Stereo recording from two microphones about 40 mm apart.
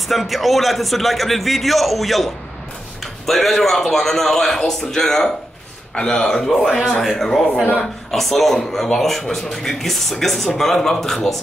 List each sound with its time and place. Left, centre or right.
0.1 s a man's voice: centre
6.5 s a man's voice: centre